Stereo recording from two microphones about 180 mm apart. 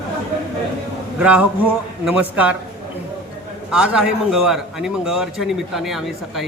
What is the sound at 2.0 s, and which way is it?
Speech, 5° right (ahead or behind).